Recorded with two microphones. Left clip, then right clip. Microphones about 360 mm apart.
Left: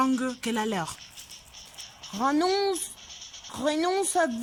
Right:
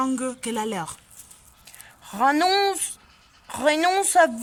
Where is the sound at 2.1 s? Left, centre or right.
Right.